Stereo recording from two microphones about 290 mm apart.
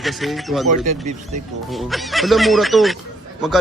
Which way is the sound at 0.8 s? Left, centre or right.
Right.